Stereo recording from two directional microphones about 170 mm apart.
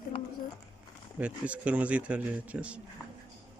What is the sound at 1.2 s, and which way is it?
Speech, 5° right (ahead or behind).